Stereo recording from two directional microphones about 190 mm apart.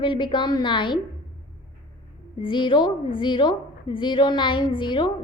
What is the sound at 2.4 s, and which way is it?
A woman's voice, 25° left (ahead or behind).